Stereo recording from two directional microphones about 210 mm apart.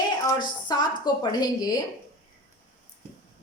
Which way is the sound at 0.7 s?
20° left (ahead or behind).